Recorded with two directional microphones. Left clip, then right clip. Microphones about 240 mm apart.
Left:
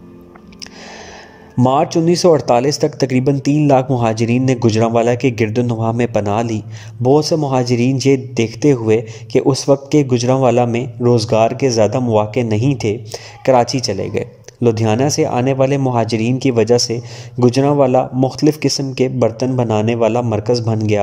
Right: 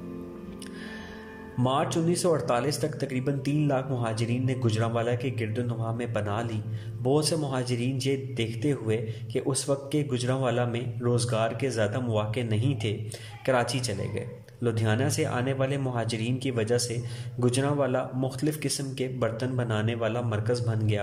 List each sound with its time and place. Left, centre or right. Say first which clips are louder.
1.6 s a man's voice: left 13 dB; left